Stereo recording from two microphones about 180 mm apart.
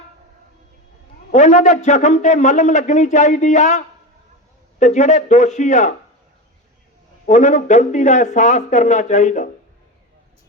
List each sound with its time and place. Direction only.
1.3 s a man's voice: 40° left (ahead or behind)
7.3 s a man's voice: 40° left (ahead or behind)